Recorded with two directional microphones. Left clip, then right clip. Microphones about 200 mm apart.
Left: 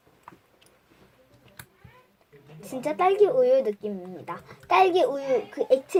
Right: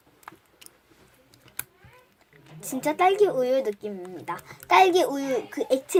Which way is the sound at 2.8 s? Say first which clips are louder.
Even; centre (ahead or behind).